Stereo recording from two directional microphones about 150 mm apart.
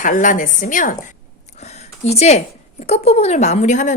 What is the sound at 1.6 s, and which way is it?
Speech, 50° left (ahead or behind).